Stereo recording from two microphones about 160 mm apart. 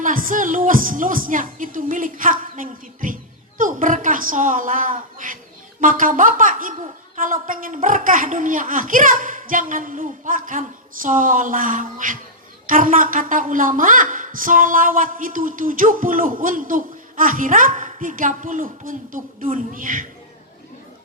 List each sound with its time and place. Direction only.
0.0 s a woman's voice: 55° right (ahead or behind)